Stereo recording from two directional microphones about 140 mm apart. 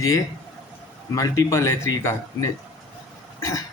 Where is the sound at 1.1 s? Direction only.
20° left (ahead or behind).